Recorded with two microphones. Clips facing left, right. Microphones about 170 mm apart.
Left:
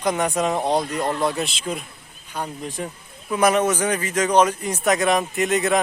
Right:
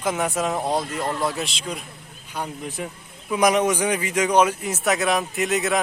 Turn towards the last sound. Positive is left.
turn(degrees=0)  # may be behind; listen again after turning